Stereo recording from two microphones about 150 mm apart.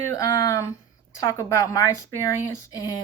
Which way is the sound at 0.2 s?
25° left (ahead or behind).